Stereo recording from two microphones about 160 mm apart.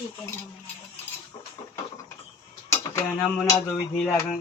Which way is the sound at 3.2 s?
5° left (ahead or behind).